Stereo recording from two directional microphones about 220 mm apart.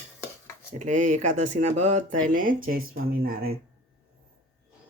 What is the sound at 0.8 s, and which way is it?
Speech, 35° right (ahead or behind).